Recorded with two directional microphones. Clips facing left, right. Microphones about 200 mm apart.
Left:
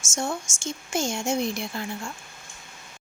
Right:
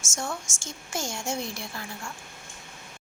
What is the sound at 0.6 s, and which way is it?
A woman's voice, 20° left (ahead or behind).